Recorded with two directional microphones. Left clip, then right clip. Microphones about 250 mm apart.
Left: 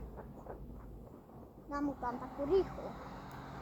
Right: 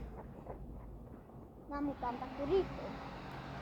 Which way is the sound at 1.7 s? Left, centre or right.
Left.